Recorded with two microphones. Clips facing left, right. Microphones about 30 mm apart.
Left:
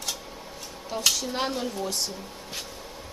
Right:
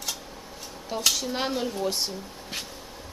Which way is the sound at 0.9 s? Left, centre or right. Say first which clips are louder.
Even; centre.